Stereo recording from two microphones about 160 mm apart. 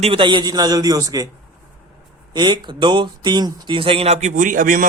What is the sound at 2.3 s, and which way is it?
Speech, 30° right (ahead or behind).